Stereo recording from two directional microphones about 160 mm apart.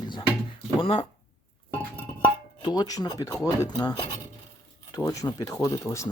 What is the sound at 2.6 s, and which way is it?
Speech, 25° left (ahead or behind).